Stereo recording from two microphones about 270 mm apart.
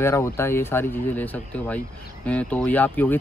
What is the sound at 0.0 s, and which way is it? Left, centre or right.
Speech, centre.